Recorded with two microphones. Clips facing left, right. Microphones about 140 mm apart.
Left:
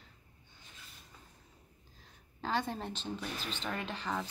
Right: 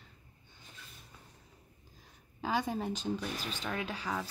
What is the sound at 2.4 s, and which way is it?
A woman's voice, 10° right (ahead or behind).